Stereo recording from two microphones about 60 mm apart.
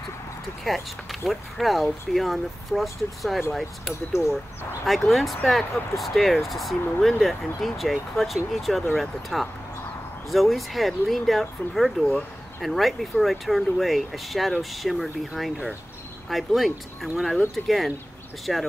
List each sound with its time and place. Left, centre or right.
0.7 s speech: centre
4.2 s speech: left
4.8 s speech: centre